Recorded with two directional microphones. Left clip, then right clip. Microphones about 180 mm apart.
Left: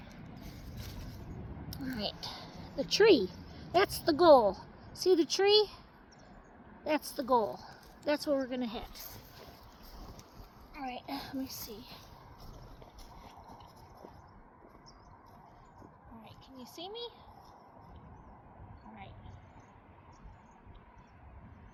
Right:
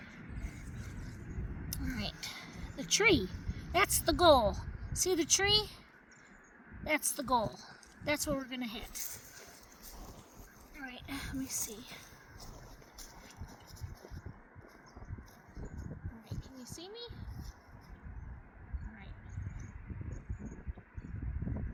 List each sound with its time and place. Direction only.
1.7 s speech: 50° right (ahead or behind)
6.8 s a woman's voice: 55° right (ahead or behind)
10.8 s whispering: 30° right (ahead or behind)
16.3 s a sound: 20° right (ahead or behind)